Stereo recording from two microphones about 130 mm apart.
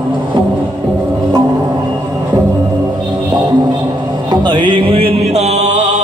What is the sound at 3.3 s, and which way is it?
Music, 30° right (ahead or behind).